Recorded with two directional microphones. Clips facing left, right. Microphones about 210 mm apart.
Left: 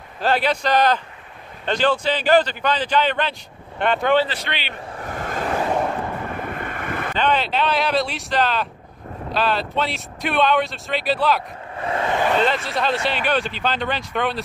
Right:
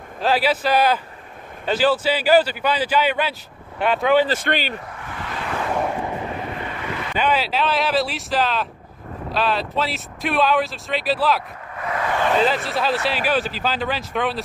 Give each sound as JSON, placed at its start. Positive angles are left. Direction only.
{"t": 0.2, "sound": "a man's voice", "side_deg": -5}
{"t": 4.3, "sound": "a man's voice", "side_deg": -45}
{"t": 4.9, "sound": "vehicle", "side_deg": 45}
{"t": 6.3, "sound": "waves", "side_deg": 50}
{"t": 7.2, "sound": "speech", "side_deg": -5}
{"t": 11.7, "sound": "vehicle", "side_deg": 30}
{"t": 12.4, "sound": "speech", "side_deg": 0}